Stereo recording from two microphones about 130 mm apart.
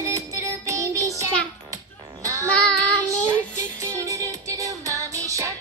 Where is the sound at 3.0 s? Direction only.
20° right (ahead or behind).